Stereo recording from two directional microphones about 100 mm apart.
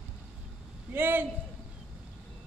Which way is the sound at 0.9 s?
20° right (ahead or behind).